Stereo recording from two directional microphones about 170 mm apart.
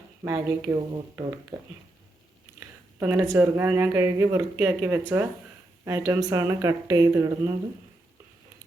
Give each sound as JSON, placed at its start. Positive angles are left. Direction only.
{"t": 0.3, "sound": "speech", "side_deg": -20}
{"t": 2.6, "sound": "speech", "side_deg": -15}